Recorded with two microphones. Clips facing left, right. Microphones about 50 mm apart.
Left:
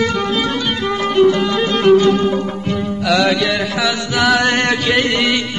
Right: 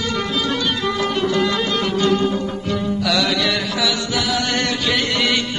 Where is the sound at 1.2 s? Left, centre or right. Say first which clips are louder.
Left 3 dB; centre.